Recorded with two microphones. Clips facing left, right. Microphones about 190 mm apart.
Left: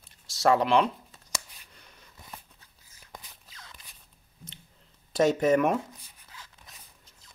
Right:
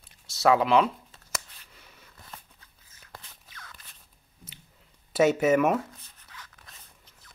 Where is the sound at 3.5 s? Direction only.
25° left (ahead or behind).